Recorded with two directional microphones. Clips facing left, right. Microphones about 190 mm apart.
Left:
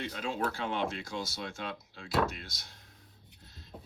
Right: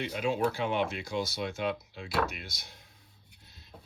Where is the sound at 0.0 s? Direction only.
15° right (ahead or behind).